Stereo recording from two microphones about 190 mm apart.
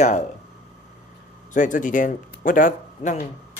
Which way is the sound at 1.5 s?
45° left (ahead or behind).